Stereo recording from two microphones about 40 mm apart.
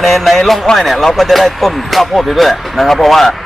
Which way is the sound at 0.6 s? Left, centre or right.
Centre.